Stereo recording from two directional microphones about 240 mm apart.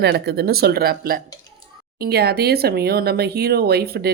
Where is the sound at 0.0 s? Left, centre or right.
Right.